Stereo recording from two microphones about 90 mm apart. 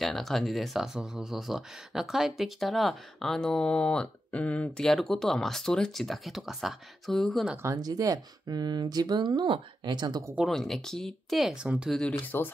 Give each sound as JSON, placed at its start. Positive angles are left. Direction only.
{"t": 0.0, "sound": "speech", "side_deg": 0}
{"t": 7.5, "sound": "speech", "side_deg": -30}
{"t": 7.8, "sound": "speech", "side_deg": -45}
{"t": 10.4, "sound": "speech", "side_deg": 5}
{"t": 12.1, "sound": "speech", "side_deg": 20}